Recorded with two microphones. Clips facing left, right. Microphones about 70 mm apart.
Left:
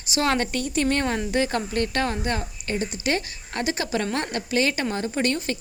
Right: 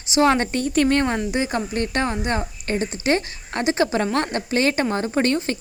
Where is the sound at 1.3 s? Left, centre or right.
Centre; by 5.6 s right.